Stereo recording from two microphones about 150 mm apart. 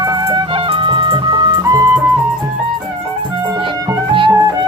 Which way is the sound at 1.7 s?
20° right (ahead or behind).